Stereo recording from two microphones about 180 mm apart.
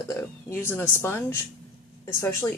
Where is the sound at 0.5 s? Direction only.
10° left (ahead or behind).